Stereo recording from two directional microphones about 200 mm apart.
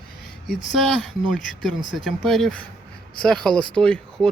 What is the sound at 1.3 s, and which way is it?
Speech, centre (ahead or behind).